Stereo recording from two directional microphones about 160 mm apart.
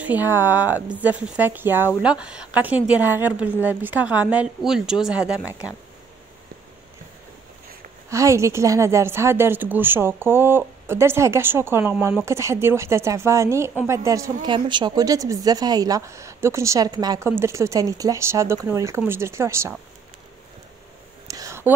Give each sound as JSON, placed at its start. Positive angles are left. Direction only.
{"t": 0.0, "sound": "a woman's voice", "side_deg": -10}
{"t": 8.1, "sound": "a woman's voice", "side_deg": -20}
{"t": 21.3, "sound": "a sound", "side_deg": -20}